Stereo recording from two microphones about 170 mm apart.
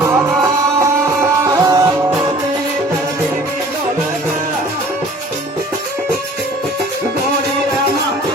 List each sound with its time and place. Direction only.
0.8 s music: 15° right (ahead or behind)